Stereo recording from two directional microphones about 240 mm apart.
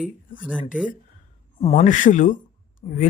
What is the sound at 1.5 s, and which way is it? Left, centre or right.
Speech, left.